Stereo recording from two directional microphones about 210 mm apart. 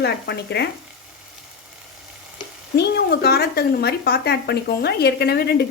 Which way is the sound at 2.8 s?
50° left (ahead or behind).